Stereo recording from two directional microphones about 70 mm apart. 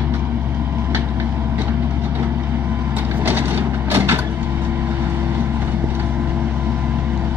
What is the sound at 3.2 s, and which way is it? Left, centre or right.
Vehicle, right.